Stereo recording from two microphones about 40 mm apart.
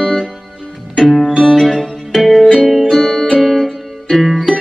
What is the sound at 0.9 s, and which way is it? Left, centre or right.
Music, centre.